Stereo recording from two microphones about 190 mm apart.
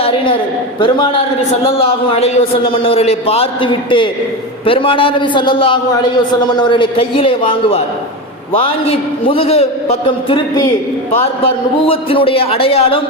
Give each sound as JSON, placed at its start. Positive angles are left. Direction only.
{"t": 0.0, "sound": "a woman's voice", "side_deg": 30}